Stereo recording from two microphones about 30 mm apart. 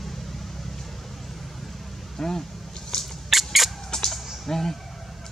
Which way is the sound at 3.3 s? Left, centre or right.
Centre.